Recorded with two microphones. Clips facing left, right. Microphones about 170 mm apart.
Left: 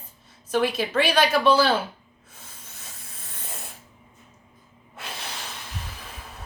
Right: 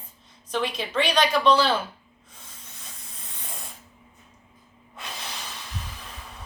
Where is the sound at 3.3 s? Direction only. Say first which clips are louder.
Left 1 dB; 5° left (ahead or behind).